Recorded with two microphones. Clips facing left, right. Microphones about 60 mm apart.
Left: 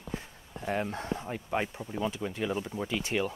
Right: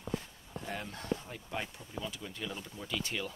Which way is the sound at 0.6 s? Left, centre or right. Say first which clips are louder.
Left 10 dB; left.